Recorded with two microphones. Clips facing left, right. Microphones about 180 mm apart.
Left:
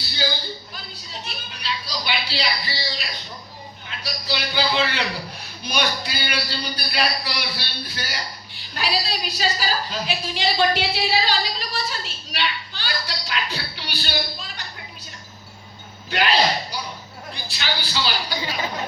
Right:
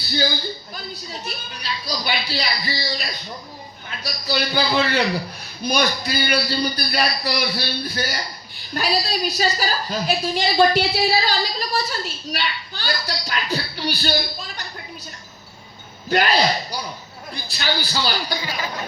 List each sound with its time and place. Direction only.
1.2 s a man's voice: 45° right (ahead or behind)
16.0 s a man's voice: 45° right (ahead or behind)